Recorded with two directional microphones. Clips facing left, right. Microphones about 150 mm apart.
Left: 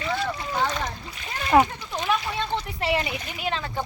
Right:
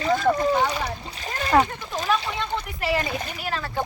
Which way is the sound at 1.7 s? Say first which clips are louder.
Right 1 dB; 45° right (ahead or behind).